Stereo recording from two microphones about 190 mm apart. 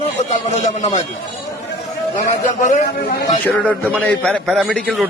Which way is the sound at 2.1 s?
40° left (ahead or behind).